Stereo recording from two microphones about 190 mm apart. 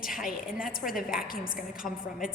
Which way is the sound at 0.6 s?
50° left (ahead or behind).